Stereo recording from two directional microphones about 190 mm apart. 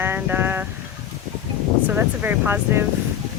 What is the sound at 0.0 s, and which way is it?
Vehicle, 10° right (ahead or behind).